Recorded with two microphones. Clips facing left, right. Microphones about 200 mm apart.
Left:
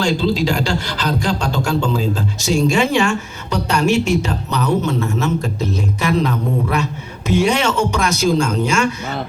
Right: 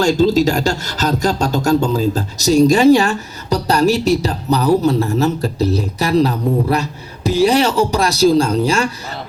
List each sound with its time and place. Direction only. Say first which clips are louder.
0.0 s speech: right 5 dB; 45° right (ahead or behind)